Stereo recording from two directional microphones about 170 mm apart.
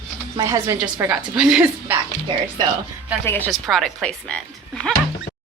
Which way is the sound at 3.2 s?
10° left (ahead or behind).